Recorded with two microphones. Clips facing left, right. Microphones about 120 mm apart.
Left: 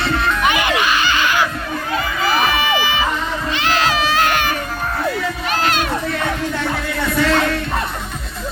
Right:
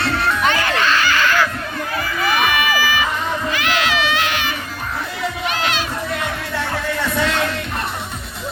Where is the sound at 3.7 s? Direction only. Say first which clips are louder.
Left 4 dB; 40° left (ahead or behind).